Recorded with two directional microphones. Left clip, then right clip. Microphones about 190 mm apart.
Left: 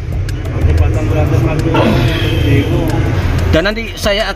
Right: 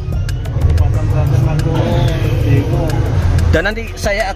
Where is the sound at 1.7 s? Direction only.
35° left (ahead or behind).